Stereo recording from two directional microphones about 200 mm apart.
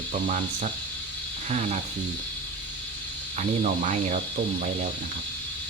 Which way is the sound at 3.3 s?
35° right (ahead or behind).